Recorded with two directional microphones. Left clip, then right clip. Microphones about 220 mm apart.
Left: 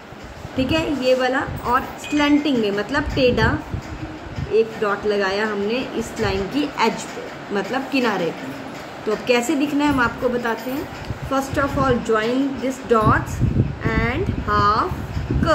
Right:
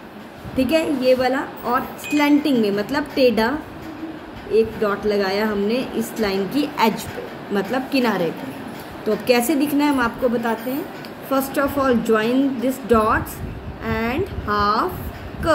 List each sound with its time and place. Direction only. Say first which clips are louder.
0.6 s a woman's voice: right 2 dB; 10° right (ahead or behind)
4.6 s a woman's voice: even; 15° right (ahead or behind)
9.2 s a woman's voice: right 1 dB; 15° right (ahead or behind)